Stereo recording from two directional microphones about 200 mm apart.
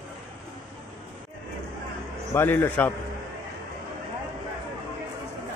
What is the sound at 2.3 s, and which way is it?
Speech, 10° left (ahead or behind).